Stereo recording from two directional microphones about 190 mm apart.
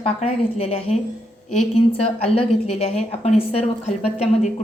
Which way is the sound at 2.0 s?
30° left (ahead or behind).